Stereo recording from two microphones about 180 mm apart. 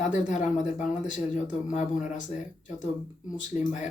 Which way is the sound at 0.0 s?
45° left (ahead or behind).